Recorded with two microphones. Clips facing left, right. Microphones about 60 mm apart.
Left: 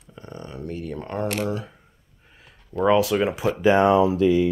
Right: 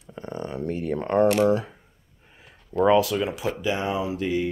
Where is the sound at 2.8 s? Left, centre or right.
Centre.